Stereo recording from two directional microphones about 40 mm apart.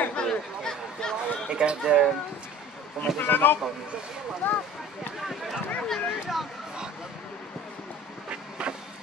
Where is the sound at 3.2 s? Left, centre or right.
Left.